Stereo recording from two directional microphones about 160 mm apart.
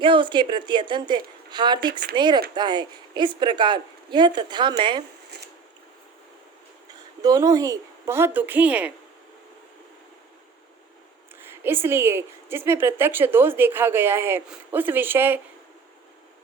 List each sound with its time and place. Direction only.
0.0 s speech: 30° right (ahead or behind)
7.2 s a woman's voice: 20° right (ahead or behind)
11.6 s a woman's voice: 15° right (ahead or behind)